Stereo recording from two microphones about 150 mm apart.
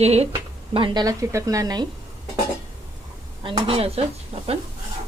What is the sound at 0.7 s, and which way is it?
A woman's voice, 35° right (ahead or behind).